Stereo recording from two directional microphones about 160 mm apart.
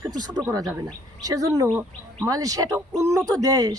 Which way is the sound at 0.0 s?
25° right (ahead or behind).